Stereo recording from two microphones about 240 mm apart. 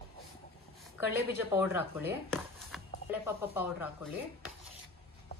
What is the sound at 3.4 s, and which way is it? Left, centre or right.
Speech, centre.